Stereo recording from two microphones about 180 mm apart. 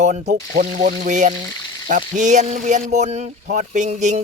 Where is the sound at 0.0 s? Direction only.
40° right (ahead or behind).